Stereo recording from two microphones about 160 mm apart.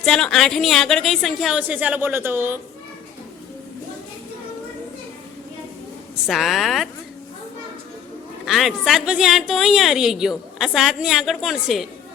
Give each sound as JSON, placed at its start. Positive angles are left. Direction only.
{"t": 0.0, "sound": "a woman's voice", "side_deg": 5}
{"t": 6.2, "sound": "a woman's voice", "side_deg": 0}
{"t": 8.4, "sound": "a woman's voice", "side_deg": 0}